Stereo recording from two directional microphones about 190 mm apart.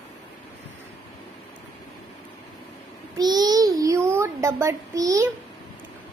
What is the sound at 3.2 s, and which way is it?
A child's voice, 20° right (ahead or behind).